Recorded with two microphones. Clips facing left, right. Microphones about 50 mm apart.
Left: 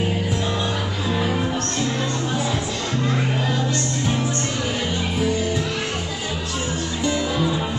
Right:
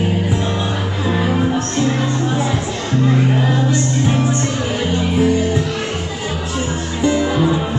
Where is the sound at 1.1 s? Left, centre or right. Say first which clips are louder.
Right 6 dB; centre.